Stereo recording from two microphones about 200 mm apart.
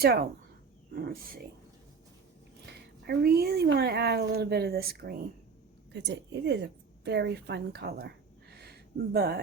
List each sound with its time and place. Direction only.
0.0 s speech: 50° right (ahead or behind)
3.1 s a woman's voice: 50° right (ahead or behind)